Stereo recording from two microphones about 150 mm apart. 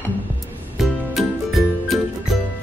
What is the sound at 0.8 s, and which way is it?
Music, centre (ahead or behind).